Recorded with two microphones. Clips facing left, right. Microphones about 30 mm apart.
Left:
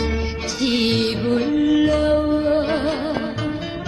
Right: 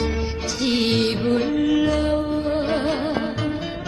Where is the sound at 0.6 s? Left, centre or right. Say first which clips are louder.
Left 1 dB; centre.